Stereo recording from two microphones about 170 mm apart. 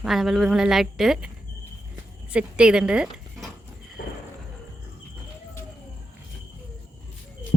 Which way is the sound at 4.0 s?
80° left.